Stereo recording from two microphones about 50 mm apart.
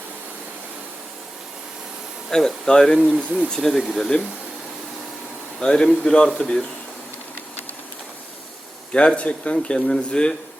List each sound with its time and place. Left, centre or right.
2.3 s speech: centre
3.2 s speech: right
3.5 s speech: centre
5.5 s speech: centre
8.9 s speech: centre